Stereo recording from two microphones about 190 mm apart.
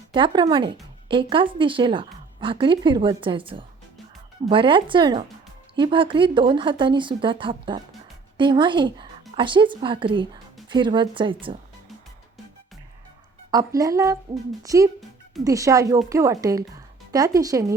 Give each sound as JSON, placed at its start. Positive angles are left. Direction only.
{"t": 0.1, "sound": "speech", "side_deg": -25}
{"t": 13.5, "sound": "a woman's voice", "side_deg": -20}